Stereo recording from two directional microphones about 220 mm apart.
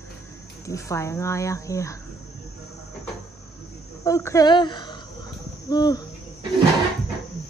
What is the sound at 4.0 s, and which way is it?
Speech, 15° left (ahead or behind).